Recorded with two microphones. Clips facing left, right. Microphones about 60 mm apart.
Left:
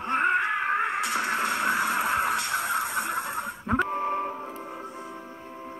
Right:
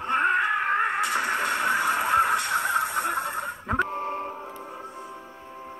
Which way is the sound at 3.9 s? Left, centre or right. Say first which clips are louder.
Left 2 dB; left.